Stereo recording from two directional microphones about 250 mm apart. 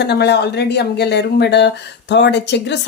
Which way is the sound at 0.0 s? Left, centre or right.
Left.